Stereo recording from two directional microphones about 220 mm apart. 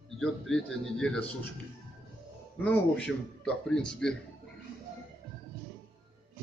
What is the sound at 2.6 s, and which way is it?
A man's voice, 5° left (ahead or behind).